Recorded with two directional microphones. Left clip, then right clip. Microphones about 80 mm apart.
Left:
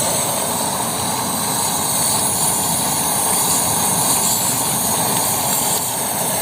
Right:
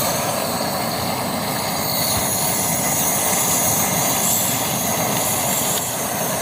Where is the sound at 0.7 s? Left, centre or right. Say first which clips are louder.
Left 1 dB; right.